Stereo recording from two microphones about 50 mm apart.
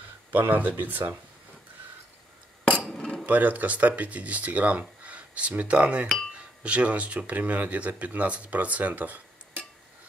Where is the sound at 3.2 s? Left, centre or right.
Right.